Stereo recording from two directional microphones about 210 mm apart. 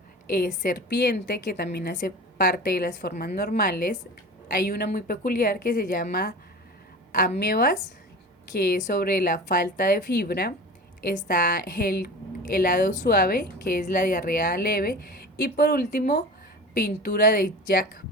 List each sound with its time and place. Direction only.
0.3 s a woman's voice: 40° left (ahead or behind)
11.4 s a woman's voice: 50° left (ahead or behind)